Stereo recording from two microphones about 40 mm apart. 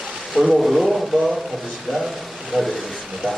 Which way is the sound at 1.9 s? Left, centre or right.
Centre.